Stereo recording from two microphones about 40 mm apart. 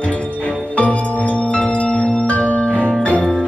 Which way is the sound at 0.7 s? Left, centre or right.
Left.